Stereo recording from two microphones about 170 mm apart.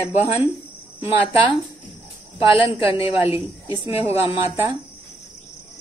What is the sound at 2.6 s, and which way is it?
Speech, 30° left (ahead or behind).